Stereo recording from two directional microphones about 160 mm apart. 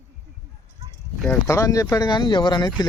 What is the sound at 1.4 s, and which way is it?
Speech, 20° left (ahead or behind).